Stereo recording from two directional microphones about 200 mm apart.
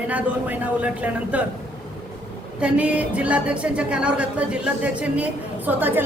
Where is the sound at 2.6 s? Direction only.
5° right (ahead or behind).